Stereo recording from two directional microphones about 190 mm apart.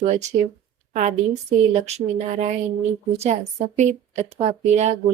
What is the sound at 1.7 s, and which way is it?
A woman's voice, 35° right (ahead or behind).